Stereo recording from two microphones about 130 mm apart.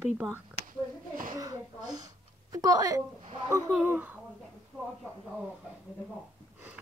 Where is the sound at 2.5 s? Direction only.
30° right (ahead or behind).